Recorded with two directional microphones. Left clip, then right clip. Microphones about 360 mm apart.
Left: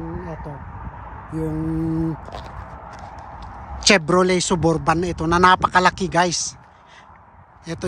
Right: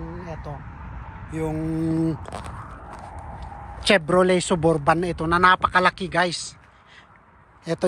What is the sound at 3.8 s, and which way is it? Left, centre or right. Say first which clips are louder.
Speech: left 2 dB; centre.